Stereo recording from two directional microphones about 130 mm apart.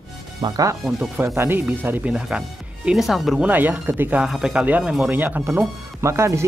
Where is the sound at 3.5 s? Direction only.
15° right (ahead or behind).